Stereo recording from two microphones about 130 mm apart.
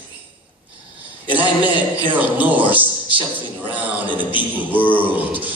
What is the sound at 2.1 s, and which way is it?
A man's voice, 15° right (ahead or behind).